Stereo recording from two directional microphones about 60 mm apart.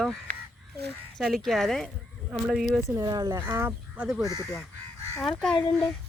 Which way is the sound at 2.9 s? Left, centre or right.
Right.